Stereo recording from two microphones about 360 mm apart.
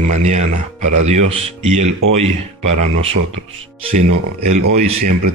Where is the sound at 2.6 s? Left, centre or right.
Right.